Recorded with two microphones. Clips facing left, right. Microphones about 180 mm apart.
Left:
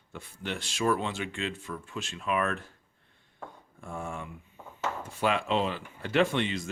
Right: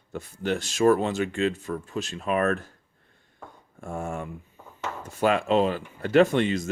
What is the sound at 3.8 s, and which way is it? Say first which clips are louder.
Speech: right 6 dB; 45° right (ahead or behind).